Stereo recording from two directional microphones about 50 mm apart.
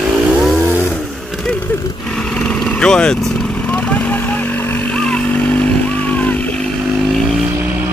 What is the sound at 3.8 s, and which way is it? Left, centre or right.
Vehicle, left.